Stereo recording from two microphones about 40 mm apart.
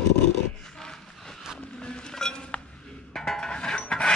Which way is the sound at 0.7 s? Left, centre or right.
Centre.